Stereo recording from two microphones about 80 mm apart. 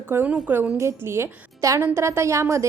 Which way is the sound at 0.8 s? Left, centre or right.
Right.